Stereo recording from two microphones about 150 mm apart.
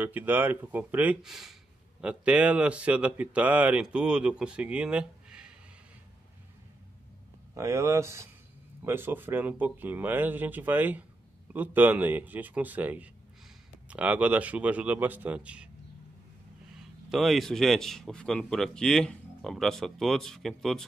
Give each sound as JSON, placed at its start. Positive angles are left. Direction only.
{"t": 0.0, "sound": "speech", "side_deg": -10}
{"t": 7.5, "sound": "speech", "side_deg": -20}
{"t": 17.1, "sound": "speech", "side_deg": 0}